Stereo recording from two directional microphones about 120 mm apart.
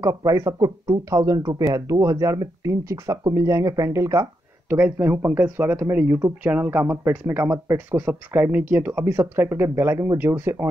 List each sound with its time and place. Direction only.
0.0 s speech: 30° right (ahead or behind)
4.6 s speech: 15° right (ahead or behind)